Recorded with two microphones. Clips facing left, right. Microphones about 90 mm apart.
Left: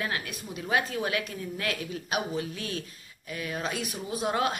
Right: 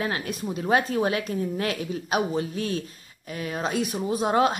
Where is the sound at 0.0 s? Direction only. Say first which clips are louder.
Right 5 dB; 35° right (ahead or behind).